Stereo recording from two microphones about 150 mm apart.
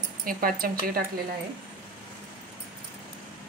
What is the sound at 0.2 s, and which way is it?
Speech, 70° right (ahead or behind).